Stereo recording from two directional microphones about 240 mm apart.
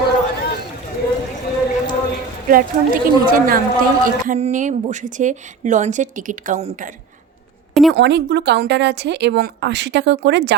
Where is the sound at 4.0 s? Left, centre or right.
Right.